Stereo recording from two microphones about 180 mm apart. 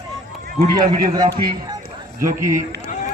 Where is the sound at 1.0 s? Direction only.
20° right (ahead or behind).